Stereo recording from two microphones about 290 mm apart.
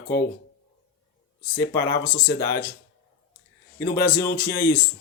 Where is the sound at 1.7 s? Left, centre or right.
Left.